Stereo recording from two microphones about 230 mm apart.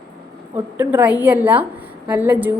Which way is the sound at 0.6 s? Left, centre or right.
Centre.